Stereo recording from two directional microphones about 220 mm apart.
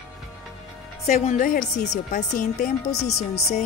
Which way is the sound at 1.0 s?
30° left (ahead or behind).